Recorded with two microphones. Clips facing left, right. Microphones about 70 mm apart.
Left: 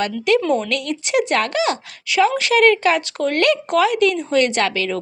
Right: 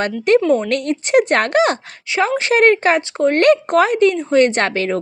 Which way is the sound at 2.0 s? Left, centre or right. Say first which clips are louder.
Even; right.